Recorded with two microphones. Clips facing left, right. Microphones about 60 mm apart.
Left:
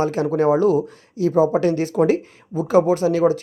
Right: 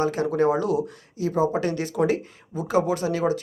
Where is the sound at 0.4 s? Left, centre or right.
Left.